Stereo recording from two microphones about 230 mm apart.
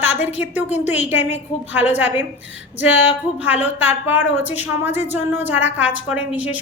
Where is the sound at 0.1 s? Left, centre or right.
Left.